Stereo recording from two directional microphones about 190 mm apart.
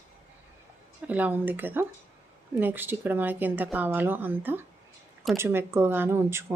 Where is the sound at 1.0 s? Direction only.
10° right (ahead or behind).